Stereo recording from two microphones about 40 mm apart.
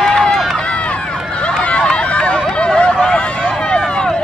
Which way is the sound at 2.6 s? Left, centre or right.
Left.